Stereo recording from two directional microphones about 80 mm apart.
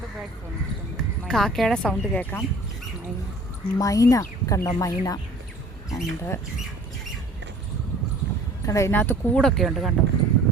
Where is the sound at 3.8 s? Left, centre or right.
Left.